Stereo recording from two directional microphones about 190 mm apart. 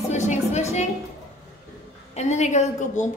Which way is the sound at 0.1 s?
40° left (ahead or behind).